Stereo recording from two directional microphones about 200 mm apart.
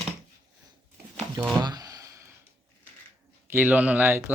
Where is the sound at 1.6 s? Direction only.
20° right (ahead or behind).